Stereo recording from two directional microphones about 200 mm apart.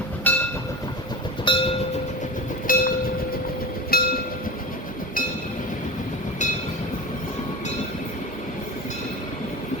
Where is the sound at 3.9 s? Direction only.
50° left (ahead or behind).